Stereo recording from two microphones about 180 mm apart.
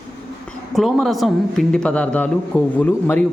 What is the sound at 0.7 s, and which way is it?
Speech, centre (ahead or behind).